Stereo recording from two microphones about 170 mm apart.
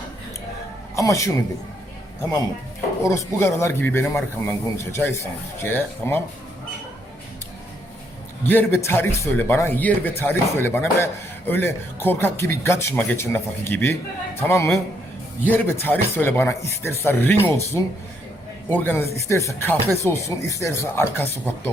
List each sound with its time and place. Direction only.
0.9 s a man's voice: 20° left (ahead or behind)
3.0 s a man's voice: 15° left (ahead or behind)
8.4 s a man's voice: 10° left (ahead or behind)